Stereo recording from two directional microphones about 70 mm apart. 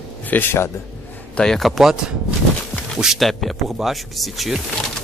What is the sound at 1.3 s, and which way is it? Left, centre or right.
Speech, centre.